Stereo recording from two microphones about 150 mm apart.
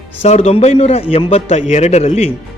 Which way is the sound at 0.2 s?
45° left (ahead or behind).